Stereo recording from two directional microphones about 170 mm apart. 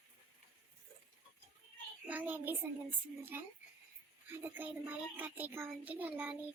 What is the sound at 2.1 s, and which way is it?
A child's voice, 10° right (ahead or behind).